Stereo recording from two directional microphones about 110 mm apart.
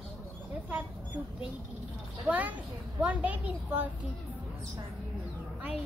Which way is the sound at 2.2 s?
15° right (ahead or behind).